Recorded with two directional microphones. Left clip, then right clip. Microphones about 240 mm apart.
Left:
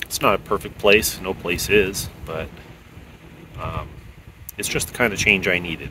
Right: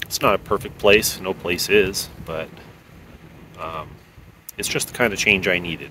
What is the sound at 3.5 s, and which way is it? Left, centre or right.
Speech, centre.